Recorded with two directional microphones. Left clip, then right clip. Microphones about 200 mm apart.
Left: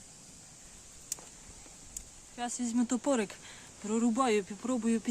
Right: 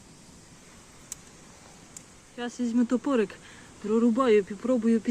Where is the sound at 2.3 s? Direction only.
20° left (ahead or behind).